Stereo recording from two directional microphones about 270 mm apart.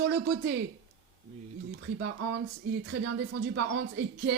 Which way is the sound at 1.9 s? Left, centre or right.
Right.